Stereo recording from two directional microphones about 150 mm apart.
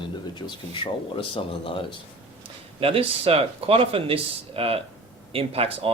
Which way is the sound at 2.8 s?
40° right (ahead or behind).